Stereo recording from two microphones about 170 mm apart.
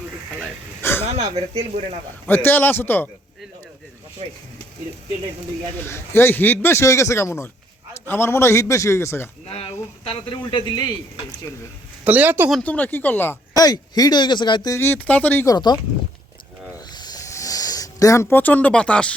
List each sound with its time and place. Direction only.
0.8 s a sound: 15° left (ahead or behind)
1.0 s stir: 40° right (ahead or behind)
2.2 s a man's voice: 10° left (ahead or behind)
4.2 s stir: 35° right (ahead or behind)
5.8 s a man's voice: 15° left (ahead or behind)
9.5 s speech: 35° left (ahead or behind)
12.0 s speech: 10° right (ahead or behind)
12.5 s a man's voice: 5° left (ahead or behind)
13.6 s speech: 20° left (ahead or behind)
15.4 s speech: 25° left (ahead or behind)
16.9 s a sound: 25° left (ahead or behind); by 19.1 s 5° left (ahead or behind)